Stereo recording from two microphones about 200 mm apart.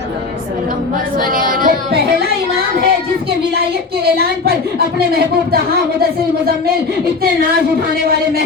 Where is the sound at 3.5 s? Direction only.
50° right (ahead or behind).